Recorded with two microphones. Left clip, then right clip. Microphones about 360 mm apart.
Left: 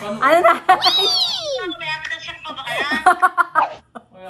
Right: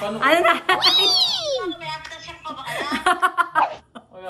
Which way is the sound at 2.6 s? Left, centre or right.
Left.